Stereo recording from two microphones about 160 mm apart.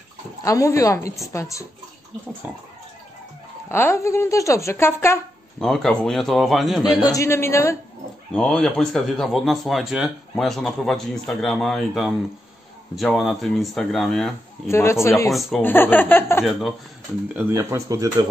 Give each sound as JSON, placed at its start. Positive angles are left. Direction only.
{"t": 0.4, "sound": "a woman's voice", "side_deg": 20}
{"t": 2.4, "sound": "speech", "side_deg": -10}
{"t": 3.6, "sound": "speech", "side_deg": 15}
{"t": 5.6, "sound": "speech", "side_deg": 0}
{"t": 7.0, "sound": "speech", "side_deg": 20}
{"t": 8.3, "sound": "speech", "side_deg": 5}
{"t": 14.7, "sound": "speech", "side_deg": 15}
{"t": 17.4, "sound": "speech", "side_deg": -20}